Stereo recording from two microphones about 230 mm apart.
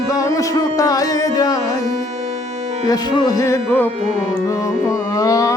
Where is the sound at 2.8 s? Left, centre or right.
Centre.